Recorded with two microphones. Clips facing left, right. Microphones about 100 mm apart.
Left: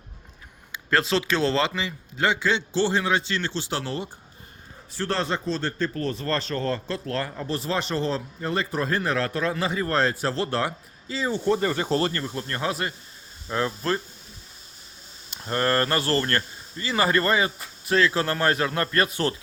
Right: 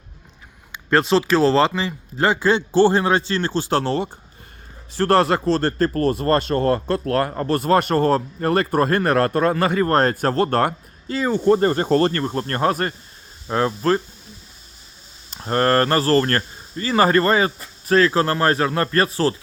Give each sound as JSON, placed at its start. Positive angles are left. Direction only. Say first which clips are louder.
{"t": 0.9, "sound": "speech", "louder": "right 6 dB", "side_deg": -30}
{"t": 6.2, "sound": "speech", "louder": "right 8 dB", "side_deg": -50}
{"t": 13.5, "sound": "speech", "louder": "right 7 dB", "side_deg": -35}
{"t": 15.3, "sound": "speech", "louder": "right 6 dB", "side_deg": -40}